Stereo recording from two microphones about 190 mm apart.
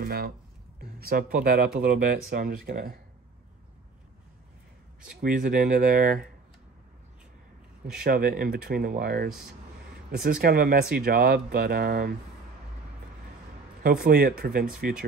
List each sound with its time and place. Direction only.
0.0 s speech: 55° right (ahead or behind)
5.2 s speech: 45° right (ahead or behind)
8.0 s speech: 50° right (ahead or behind)
13.8 s speech: 50° right (ahead or behind)